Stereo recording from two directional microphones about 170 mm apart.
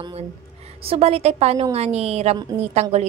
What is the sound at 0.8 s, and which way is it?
A woman's voice, 35° right (ahead or behind).